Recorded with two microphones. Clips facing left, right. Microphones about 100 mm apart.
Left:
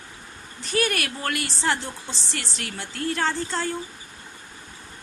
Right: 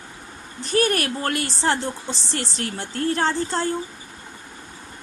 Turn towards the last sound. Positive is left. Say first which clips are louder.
# right 4 dB
turn(degrees=-35)  # may be behind; listen again after turning